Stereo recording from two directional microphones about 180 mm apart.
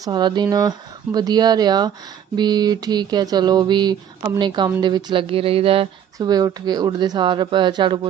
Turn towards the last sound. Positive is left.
turn(degrees=-25)  # may be behind; listen again after turning